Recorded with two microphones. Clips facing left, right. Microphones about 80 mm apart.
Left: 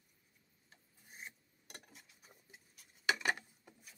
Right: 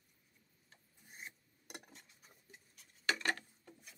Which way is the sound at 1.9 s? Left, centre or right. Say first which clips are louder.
Even; centre.